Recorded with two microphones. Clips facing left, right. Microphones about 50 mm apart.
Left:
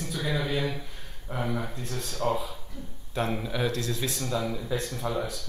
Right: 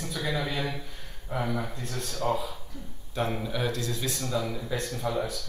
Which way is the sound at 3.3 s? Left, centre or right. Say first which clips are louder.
Left 1 dB; centre.